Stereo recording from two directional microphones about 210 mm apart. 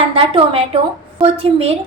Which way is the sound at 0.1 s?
25° right (ahead or behind).